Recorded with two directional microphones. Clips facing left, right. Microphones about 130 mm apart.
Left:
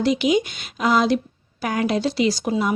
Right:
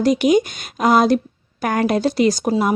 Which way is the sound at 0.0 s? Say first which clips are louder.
Right 4 dB; 45° right (ahead or behind).